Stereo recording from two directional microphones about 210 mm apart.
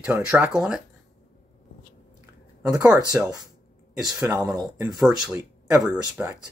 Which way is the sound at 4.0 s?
Centre (ahead or behind).